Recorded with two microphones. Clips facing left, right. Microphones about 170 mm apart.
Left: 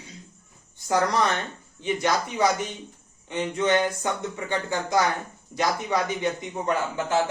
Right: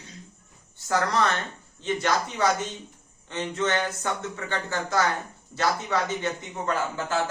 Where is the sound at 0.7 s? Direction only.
15° left (ahead or behind).